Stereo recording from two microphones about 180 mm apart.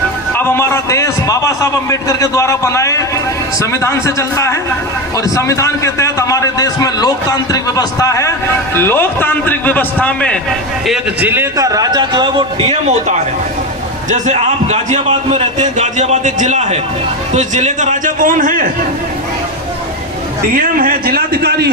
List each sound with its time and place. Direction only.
0.3 s a man's voice: 15° left (ahead or behind)
10.8 s a man's voice: 5° right (ahead or behind); by 13.0 s 30° right (ahead or behind)
14.1 s a man's voice: 40° right (ahead or behind)
20.6 s a man's voice: 55° right (ahead or behind)